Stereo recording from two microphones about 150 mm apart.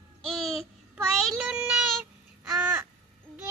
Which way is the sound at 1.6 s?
10° right (ahead or behind).